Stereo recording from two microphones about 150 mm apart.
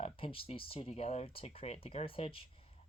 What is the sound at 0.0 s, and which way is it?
Speech, 40° left (ahead or behind).